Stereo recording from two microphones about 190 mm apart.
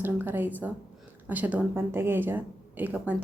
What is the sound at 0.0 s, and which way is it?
A woman's voice, 10° right (ahead or behind).